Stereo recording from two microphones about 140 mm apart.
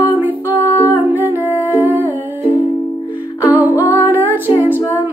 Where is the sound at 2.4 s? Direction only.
40° left (ahead or behind).